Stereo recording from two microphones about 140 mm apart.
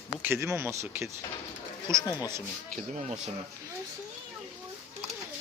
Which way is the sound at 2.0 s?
25° left (ahead or behind).